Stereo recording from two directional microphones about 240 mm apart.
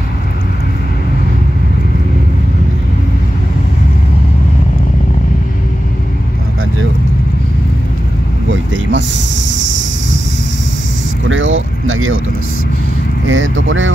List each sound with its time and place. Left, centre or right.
8.5 s a sound: right
11.2 s vehicle: right
13.3 s speech: right